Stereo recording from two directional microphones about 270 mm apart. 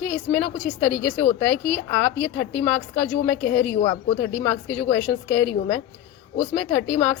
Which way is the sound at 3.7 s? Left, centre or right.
Centre.